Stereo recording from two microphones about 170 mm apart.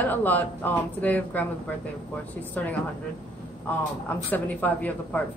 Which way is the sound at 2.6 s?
10° left (ahead or behind).